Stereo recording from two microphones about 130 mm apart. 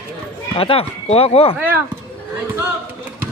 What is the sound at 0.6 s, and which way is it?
Speech, 45° left (ahead or behind).